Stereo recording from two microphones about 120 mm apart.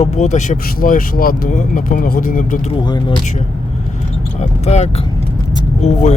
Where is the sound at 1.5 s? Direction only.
90° left.